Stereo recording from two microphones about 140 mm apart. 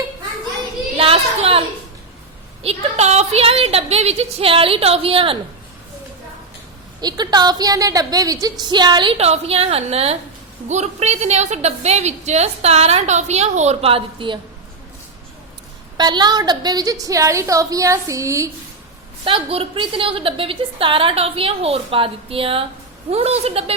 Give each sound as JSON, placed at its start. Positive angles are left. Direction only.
{"t": 0.9, "sound": "a sound", "side_deg": -45}
{"t": 2.6, "sound": "a woman's voice", "side_deg": -50}
{"t": 7.0, "sound": "a woman's voice", "side_deg": -30}
{"t": 9.1, "sound": "a woman's voice", "side_deg": -50}
{"t": 16.0, "sound": "a woman's voice", "side_deg": -30}
{"t": 19.2, "sound": "a woman's voice", "side_deg": -40}